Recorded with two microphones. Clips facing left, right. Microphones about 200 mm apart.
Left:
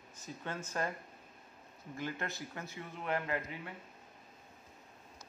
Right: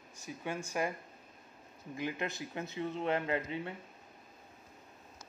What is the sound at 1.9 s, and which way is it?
Speech, 15° right (ahead or behind).